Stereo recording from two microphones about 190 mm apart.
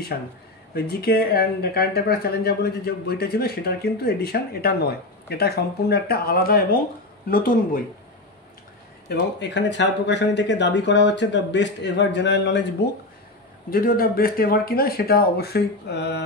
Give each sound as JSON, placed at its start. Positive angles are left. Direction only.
{"t": 0.7, "sound": "speech", "side_deg": 55}
{"t": 9.1, "sound": "speech", "side_deg": 70}
{"t": 13.7, "sound": "speech", "side_deg": 50}